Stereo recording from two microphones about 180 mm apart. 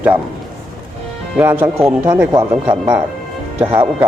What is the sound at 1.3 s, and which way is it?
Speech, 10° right (ahead or behind).